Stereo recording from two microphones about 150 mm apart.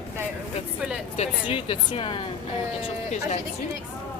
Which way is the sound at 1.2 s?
40° left (ahead or behind).